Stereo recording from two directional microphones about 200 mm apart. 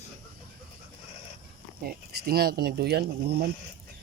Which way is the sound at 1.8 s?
50° right (ahead or behind).